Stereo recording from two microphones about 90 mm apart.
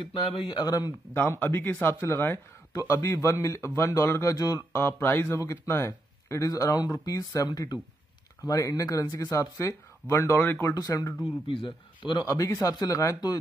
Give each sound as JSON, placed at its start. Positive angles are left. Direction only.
{"t": 0.1, "sound": "speech", "side_deg": 65}
{"t": 1.4, "sound": "speech", "side_deg": 20}
{"t": 4.7, "sound": "speech", "side_deg": 25}
{"t": 10.7, "sound": "speech", "side_deg": 40}
{"t": 11.4, "sound": "a man's voice", "side_deg": 70}
{"t": 12.3, "sound": "speech", "side_deg": 40}